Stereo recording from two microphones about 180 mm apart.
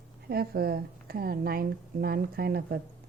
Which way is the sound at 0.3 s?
60° right (ahead or behind).